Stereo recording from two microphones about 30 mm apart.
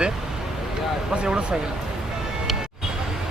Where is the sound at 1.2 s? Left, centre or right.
Right.